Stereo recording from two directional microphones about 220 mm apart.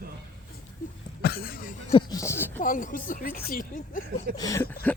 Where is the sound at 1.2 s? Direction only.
45° left (ahead or behind).